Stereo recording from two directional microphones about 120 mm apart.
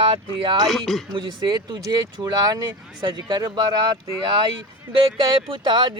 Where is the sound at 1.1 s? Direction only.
40° right (ahead or behind).